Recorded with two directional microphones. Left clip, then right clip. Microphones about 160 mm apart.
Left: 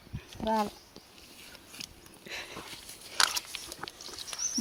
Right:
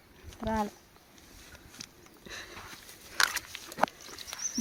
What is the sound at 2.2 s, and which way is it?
Sniff, 65° right (ahead or behind).